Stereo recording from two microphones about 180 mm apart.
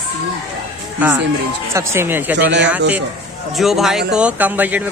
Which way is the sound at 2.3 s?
75° right (ahead or behind).